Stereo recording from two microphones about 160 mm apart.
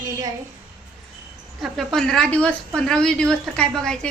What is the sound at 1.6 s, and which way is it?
Speech, centre (ahead or behind).